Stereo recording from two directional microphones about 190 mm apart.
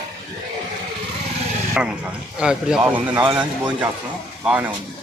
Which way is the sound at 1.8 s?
5° right (ahead or behind).